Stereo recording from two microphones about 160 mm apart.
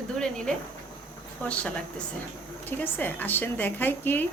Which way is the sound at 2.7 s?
10° left (ahead or behind).